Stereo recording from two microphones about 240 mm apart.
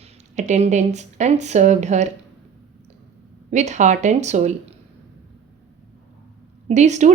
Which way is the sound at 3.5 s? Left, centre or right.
Right.